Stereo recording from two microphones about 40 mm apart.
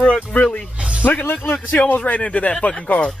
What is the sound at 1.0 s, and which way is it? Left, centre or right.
Speech, left.